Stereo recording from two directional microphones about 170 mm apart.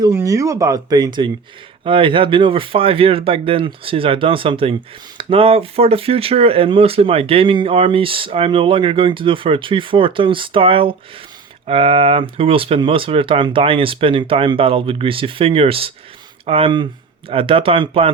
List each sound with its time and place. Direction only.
0.0 s speech: 15° right (ahead or behind); by 18.1 s 35° right (ahead or behind)